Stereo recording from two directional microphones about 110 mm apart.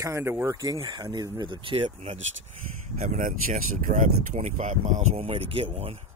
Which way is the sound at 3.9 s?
90° right.